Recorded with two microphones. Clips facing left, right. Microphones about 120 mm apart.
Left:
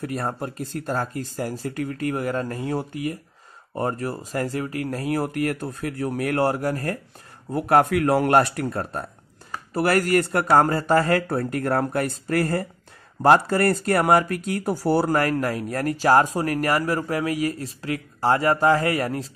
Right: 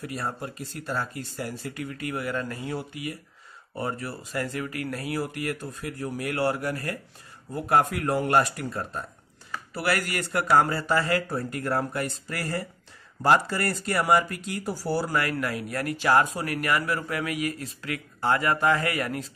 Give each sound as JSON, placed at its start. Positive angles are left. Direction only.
{"t": 0.0, "sound": "speech", "side_deg": 50}
{"t": 6.3, "sound": "speech", "side_deg": 40}
{"t": 7.5, "sound": "speech", "side_deg": 60}
{"t": 9.5, "sound": "speech", "side_deg": 45}
{"t": 15.1, "sound": "speech", "side_deg": 40}